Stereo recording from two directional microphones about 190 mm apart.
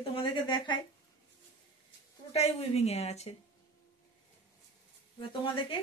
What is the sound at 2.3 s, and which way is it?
A woman's voice, 35° left (ahead or behind).